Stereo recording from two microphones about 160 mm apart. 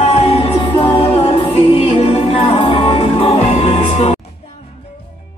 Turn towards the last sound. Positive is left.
turn(degrees=40)  # may be behind; listen again after turning